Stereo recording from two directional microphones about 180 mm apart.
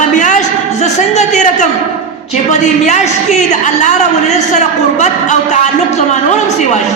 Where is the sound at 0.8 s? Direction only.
40° left (ahead or behind).